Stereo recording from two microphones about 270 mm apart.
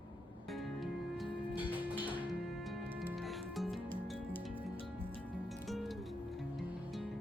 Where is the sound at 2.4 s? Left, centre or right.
Centre.